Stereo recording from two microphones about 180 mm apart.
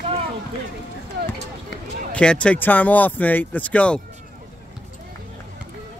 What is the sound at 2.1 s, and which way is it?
Speech, 5° left (ahead or behind).